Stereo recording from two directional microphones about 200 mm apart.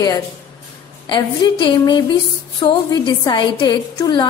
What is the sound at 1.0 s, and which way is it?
A woman's voice, 20° left (ahead or behind).